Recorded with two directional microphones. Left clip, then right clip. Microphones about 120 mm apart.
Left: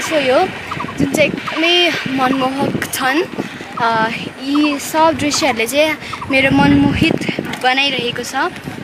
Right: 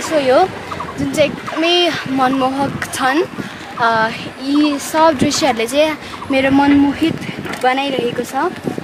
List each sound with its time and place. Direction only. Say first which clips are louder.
0.2 s a woman's voice: right 2 dB; 5° left (ahead or behind); by 8.5 s 20° left (ahead or behind)